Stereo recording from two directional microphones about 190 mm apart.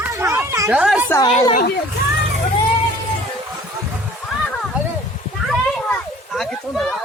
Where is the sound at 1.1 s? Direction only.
20° left (ahead or behind).